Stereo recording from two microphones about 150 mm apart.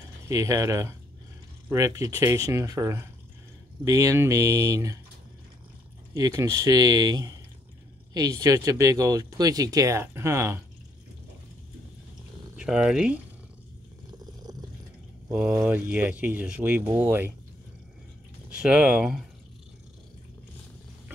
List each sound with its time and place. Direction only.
0.3 s speech: 20° right (ahead or behind)
6.1 s speech: 25° right (ahead or behind)
12.5 s speech: 5° right (ahead or behind)
15.6 s speech: 10° right (ahead or behind)
18.6 s speech: 5° right (ahead or behind)